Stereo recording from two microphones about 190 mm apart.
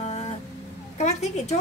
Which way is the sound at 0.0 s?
35° left (ahead or behind).